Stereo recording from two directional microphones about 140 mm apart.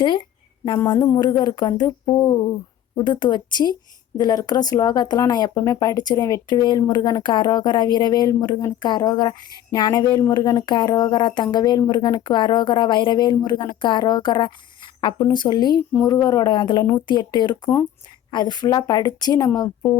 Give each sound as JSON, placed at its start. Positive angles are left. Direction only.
{"t": 0.0, "sound": "a sound", "side_deg": 35}
{"t": 0.9, "sound": "music", "side_deg": 30}
{"t": 2.9, "sound": "speech", "side_deg": 35}
{"t": 16.0, "sound": "music", "side_deg": 25}
{"t": 17.1, "sound": "speech", "side_deg": 30}
{"t": 18.3, "sound": "music", "side_deg": 30}